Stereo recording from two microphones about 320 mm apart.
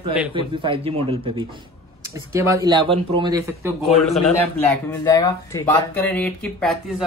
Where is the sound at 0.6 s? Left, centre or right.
Centre.